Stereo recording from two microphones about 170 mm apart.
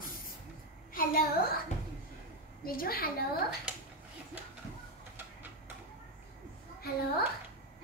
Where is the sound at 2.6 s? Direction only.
60° left (ahead or behind).